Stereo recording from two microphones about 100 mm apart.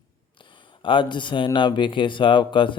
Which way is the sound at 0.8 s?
55° left (ahead or behind).